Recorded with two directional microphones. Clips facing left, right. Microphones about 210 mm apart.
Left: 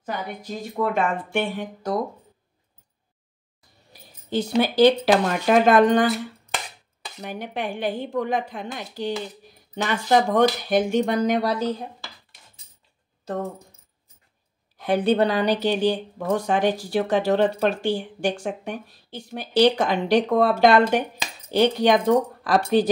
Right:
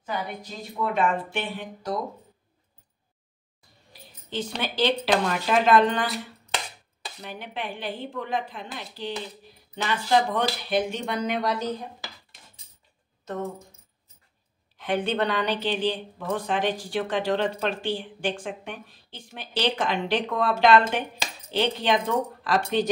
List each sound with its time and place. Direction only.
0.0 s speech: 50° left (ahead or behind)
3.9 s a sound: 40° left (ahead or behind)
4.6 s speech: 40° left (ahead or behind)
14.8 s speech: 35° left (ahead or behind)